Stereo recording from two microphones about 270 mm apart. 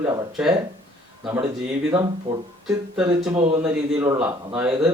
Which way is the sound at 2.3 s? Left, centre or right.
Right.